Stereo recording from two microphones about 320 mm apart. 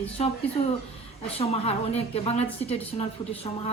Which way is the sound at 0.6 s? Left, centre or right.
Left.